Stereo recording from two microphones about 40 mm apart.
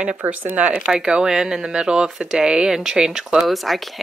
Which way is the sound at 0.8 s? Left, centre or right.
Centre.